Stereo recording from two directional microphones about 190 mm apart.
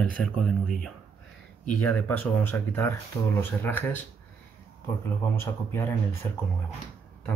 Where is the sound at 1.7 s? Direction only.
10° left (ahead or behind).